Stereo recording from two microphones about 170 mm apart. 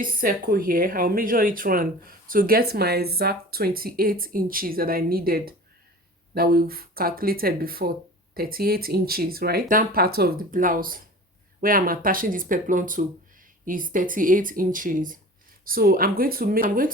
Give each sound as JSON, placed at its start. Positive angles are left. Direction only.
{"t": 0.0, "sound": "speech", "side_deg": -55}